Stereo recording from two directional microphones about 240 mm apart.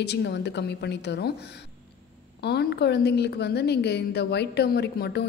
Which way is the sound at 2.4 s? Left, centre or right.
Left.